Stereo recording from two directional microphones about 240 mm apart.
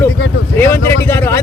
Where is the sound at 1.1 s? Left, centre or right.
Centre.